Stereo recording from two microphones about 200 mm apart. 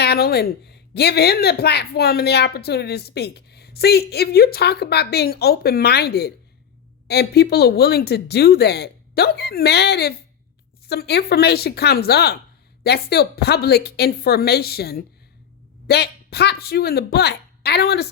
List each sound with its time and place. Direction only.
0.0 s speech: 50° left (ahead or behind)